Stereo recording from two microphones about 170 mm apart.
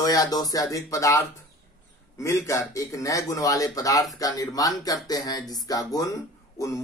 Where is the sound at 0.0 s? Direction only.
20° left (ahead or behind).